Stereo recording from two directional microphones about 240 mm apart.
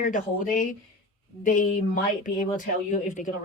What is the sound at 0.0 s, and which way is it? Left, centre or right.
Speech, left.